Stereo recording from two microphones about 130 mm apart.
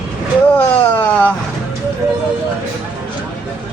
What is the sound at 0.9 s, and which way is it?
Vehicle, 10° left (ahead or behind).